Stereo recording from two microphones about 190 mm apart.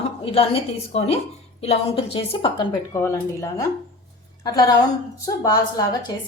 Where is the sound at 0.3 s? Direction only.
30° left (ahead or behind).